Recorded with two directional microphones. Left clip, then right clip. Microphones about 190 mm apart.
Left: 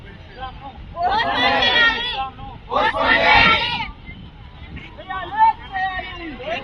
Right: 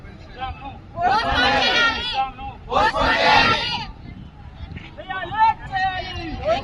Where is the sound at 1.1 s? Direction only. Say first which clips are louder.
Left 2 dB; 10° right (ahead or behind).